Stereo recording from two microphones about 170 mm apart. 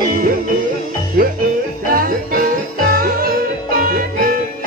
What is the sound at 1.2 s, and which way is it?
Music, 60° right (ahead or behind).